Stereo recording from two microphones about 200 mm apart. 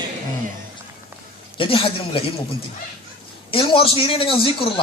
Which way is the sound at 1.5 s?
25° left (ahead or behind).